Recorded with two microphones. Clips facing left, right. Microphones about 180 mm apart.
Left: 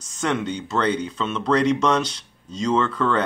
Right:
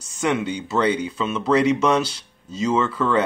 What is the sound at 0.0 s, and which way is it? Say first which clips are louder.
Speech: right 2 dB; 5° right (ahead or behind).